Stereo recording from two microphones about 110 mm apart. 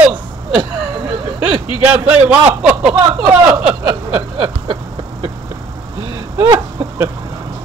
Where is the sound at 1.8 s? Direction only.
15° right (ahead or behind).